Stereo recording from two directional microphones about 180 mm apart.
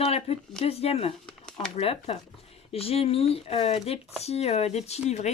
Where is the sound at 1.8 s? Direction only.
30° left (ahead or behind).